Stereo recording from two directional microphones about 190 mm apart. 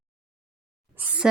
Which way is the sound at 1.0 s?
5° right (ahead or behind).